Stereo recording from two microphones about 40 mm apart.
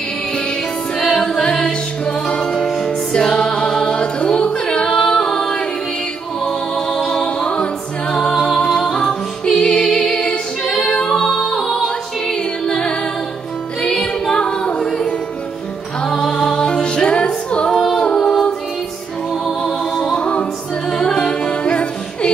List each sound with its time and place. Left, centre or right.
0.9 s music: centre
7.1 s music: left
8.3 s music: centre
11.6 s music: centre
12.6 s music: left
14.3 s a capella: left
16.0 s music: centre
19.6 s music: centre